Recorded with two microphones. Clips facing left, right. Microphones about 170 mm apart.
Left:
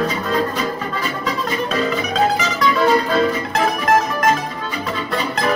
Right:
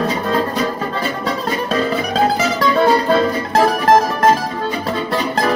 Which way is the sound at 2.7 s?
35° right (ahead or behind).